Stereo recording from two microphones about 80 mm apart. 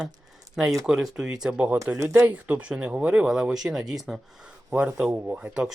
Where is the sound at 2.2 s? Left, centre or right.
Centre.